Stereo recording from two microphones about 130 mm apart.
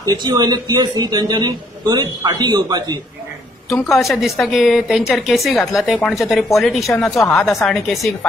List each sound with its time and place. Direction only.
0.0 s a man's voice: 30° right (ahead or behind)
3.9 s a woman's voice: centre (ahead or behind)